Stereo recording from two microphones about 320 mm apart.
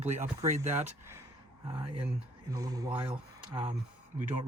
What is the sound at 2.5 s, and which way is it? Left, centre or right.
Speech, centre.